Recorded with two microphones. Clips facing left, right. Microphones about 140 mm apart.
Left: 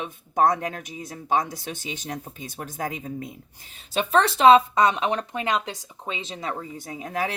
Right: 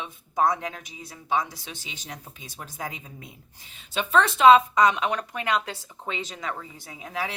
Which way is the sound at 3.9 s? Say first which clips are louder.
Left 2 dB; 35° left (ahead or behind).